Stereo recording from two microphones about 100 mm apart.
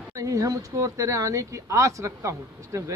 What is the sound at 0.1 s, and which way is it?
A man's voice, 35° right (ahead or behind).